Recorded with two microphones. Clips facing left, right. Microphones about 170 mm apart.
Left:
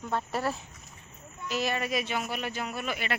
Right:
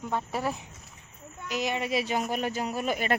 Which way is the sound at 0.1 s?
10° right (ahead or behind).